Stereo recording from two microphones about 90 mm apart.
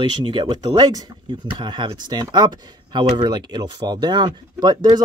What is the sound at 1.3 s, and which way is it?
Speech, 65° right (ahead or behind).